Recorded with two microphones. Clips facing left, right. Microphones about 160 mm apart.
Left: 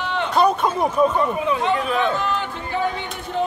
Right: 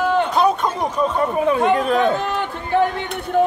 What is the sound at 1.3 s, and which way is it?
Speech, 50° right (ahead or behind).